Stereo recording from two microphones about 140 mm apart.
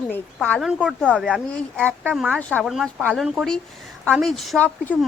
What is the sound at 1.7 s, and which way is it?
Speech, 15° right (ahead or behind).